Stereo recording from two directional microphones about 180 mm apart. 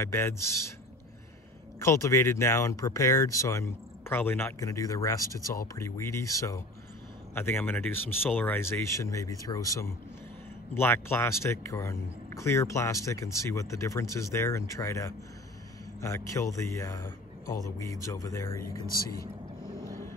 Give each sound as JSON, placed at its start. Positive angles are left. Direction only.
{"t": 0.0, "sound": "speech", "side_deg": 15}
{"t": 1.8, "sound": "speech", "side_deg": 15}